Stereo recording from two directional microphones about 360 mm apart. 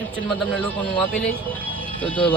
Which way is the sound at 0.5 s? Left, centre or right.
Centre.